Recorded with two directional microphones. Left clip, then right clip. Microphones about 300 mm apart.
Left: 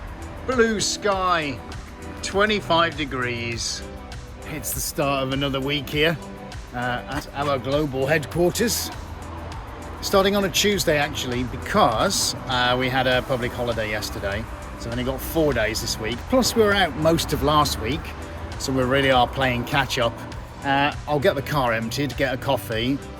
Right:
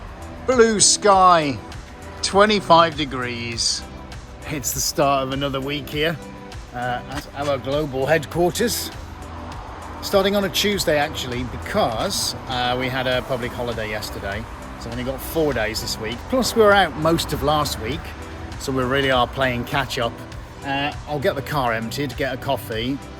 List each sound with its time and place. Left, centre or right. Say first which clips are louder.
0.4 s speech: right 5 dB; centre
4.4 s speech: right 6 dB; right; by 8.9 s centre
10.1 s speech: right 1 dB; centre